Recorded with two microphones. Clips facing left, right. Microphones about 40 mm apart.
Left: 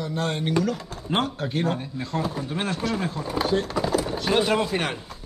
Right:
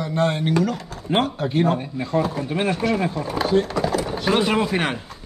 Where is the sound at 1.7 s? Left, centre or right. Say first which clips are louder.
Right 6 dB; centre.